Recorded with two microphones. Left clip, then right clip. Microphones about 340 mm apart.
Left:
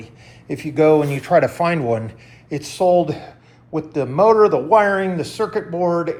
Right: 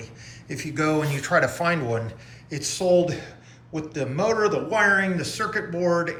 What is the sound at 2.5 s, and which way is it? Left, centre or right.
A man's voice, centre.